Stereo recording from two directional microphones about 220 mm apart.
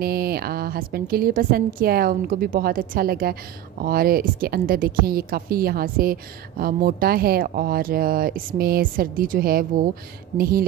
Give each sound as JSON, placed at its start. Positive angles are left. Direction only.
{"t": 0.0, "sound": "a woman's voice", "side_deg": -45}